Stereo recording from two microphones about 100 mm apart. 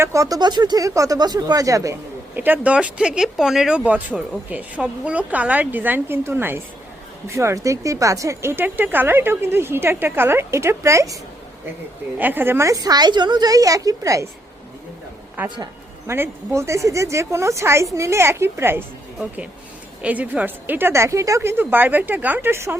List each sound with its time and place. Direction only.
0.0 s a woman's voice: 35° right (ahead or behind)
2.3 s a woman's voice: 20° right (ahead or behind)
12.1 s a woman's voice: 20° right (ahead or behind); by 14.3 s 35° right (ahead or behind)
15.4 s speech: 50° right (ahead or behind)
16.0 s a woman's voice: 25° right (ahead or behind)
20.0 s a woman's voice: 15° right (ahead or behind)